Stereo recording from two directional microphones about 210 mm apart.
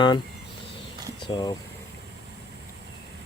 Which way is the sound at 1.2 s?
20° left (ahead or behind).